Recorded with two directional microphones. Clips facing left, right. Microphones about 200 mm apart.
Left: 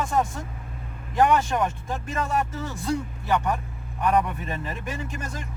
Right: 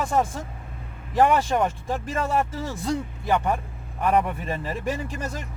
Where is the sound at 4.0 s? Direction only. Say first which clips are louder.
Right 1 dB; 25° right (ahead or behind).